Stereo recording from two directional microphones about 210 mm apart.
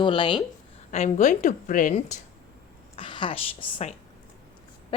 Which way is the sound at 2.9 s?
25° left (ahead or behind).